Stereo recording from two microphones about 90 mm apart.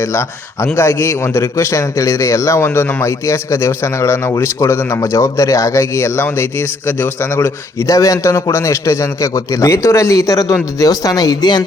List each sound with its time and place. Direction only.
0.0 s a man's voice: 30° left (ahead or behind); by 11.6 s 50° left (ahead or behind)